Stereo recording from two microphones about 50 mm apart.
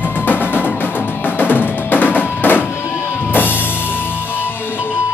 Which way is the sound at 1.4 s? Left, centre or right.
Left.